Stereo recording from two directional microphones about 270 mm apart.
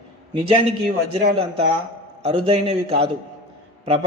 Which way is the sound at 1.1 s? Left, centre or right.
Right.